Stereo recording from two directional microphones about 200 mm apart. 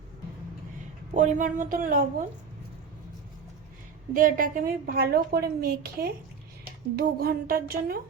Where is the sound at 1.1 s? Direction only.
40° right (ahead or behind).